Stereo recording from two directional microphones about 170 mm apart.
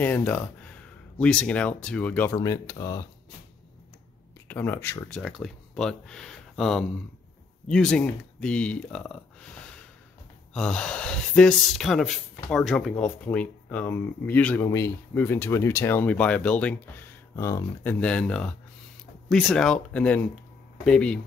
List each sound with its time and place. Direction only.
0.0 s speech: 10° left (ahead or behind)
2.3 s speech: 20° left (ahead or behind)
4.5 s speech: 10° left (ahead or behind)
5.2 s speech: centre (ahead or behind)
10.5 s speech: 5° left (ahead or behind)